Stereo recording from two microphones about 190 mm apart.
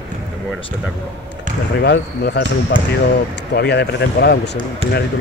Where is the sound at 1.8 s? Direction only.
60° left (ahead or behind).